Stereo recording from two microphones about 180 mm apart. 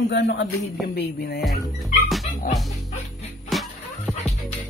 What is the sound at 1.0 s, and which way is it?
Music, 60° left (ahead or behind).